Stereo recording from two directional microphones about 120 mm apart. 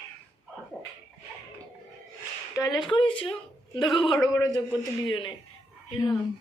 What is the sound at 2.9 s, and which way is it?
Speech, 45° left (ahead or behind).